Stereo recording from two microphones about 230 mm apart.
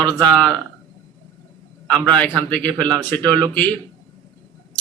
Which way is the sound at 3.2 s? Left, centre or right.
Centre.